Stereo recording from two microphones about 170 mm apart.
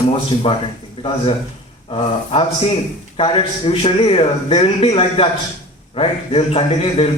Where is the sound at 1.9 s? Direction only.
35° left (ahead or behind).